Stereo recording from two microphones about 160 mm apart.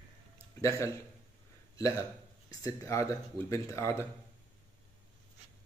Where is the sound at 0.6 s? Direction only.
20° left (ahead or behind).